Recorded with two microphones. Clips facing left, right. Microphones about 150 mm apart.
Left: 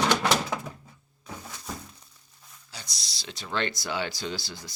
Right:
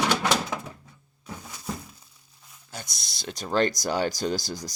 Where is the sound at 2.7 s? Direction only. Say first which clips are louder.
Right 5 dB; 50° right (ahead or behind).